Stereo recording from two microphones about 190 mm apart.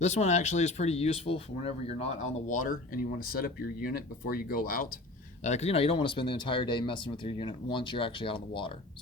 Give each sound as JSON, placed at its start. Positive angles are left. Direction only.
{"t": 0.0, "sound": "speech", "side_deg": 35}
{"t": 5.4, "sound": "speech", "side_deg": 35}